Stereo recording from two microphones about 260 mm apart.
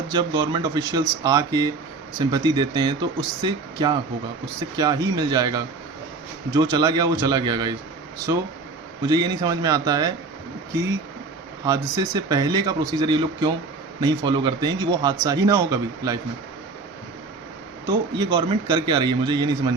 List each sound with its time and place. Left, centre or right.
0.1 s speech: centre
9.0 s speech: centre
11.6 s speech: centre
17.8 s speech: centre